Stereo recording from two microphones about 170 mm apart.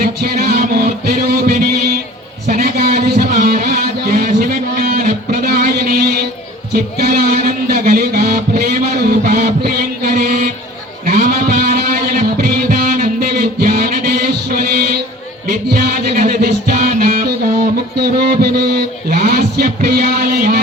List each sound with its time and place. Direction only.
0.0 s music: 65° right (ahead or behind)